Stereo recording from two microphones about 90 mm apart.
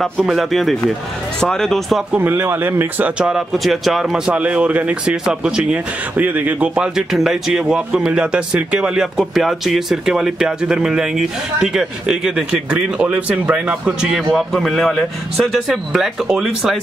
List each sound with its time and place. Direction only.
0.3 s speech: centre (ahead or behind)
2.1 s speech: 25° right (ahead or behind)
3.2 s speech: 5° right (ahead or behind)
14.1 s speech: centre (ahead or behind)